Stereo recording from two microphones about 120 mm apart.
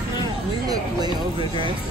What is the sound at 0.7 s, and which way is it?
Speech, 35° right (ahead or behind).